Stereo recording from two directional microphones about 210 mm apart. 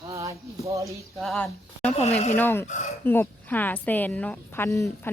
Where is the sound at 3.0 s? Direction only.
10° left (ahead or behind).